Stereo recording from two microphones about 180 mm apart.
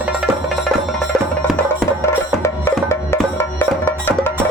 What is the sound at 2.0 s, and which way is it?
Music, 15° left (ahead or behind).